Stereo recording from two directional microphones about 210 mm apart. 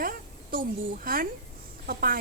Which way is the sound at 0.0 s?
40° right (ahead or behind).